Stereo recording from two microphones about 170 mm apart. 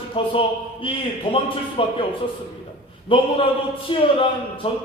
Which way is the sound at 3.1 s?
30° left (ahead or behind).